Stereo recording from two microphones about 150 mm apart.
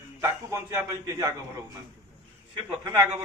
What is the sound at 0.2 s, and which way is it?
A man's voice, 15° right (ahead or behind).